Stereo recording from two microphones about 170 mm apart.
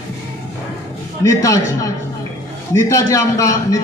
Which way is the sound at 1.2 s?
20° left (ahead or behind).